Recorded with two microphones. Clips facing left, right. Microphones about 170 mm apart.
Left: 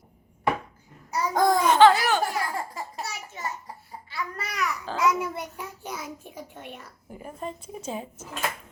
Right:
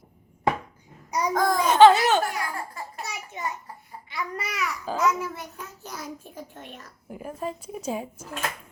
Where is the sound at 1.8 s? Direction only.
20° right (ahead or behind).